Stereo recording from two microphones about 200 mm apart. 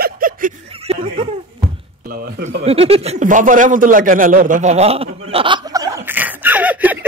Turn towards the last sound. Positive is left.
turn(degrees=-10)  # may be behind; listen again after turning